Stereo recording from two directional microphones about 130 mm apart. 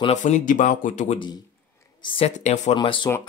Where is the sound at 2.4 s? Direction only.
65° left (ahead or behind).